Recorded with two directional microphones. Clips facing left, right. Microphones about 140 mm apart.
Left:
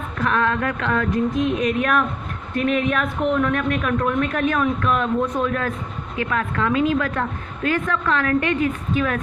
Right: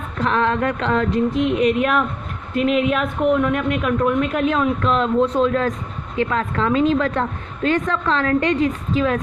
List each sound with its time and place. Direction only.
0.2 s a woman's voice: 25° right (ahead or behind)
1.5 s a woman's voice: 15° right (ahead or behind)